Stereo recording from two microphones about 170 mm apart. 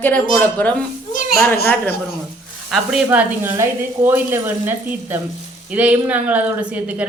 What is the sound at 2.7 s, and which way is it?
Speech, 5° right (ahead or behind).